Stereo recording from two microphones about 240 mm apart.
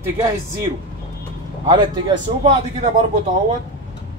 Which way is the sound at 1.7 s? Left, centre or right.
Centre.